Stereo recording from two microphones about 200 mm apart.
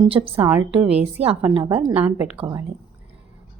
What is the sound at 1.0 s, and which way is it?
Speech, 30° right (ahead or behind).